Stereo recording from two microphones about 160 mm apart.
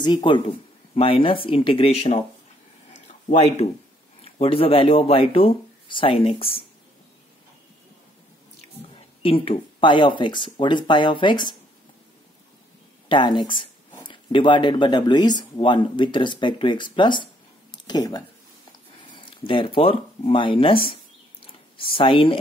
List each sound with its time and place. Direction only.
0.0 s speech: 30° left (ahead or behind)
2.9 s a sound: 45° left (ahead or behind)
4.2 s speech: 40° left (ahead or behind)
8.9 s speech: 35° left (ahead or behind)
13.1 s speech: 30° left (ahead or behind)